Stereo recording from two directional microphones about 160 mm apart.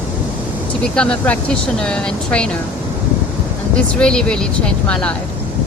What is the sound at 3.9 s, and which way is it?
Speech, 5° left (ahead or behind).